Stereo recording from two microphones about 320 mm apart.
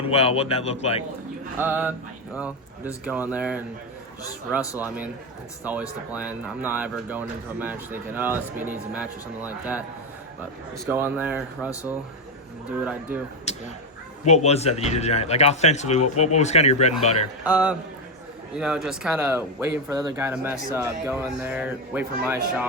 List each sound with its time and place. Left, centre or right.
0.0 s a man's voice: centre
1.5 s speech: centre
4.8 s speech: centre
6.1 s speech: centre
10.8 s speech: centre
12.8 s speech: centre
14.3 s a man's voice: left
17.4 s speech: centre